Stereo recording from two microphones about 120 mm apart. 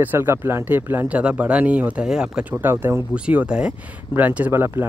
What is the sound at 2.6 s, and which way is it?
Speech, 20° right (ahead or behind).